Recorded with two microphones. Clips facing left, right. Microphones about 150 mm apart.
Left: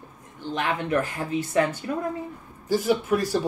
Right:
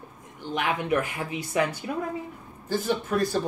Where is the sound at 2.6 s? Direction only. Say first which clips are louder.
Left 5 dB; 10° left (ahead or behind).